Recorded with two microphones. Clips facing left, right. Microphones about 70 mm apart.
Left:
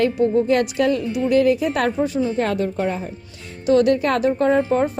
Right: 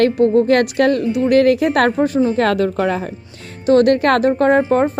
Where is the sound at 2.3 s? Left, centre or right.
Right.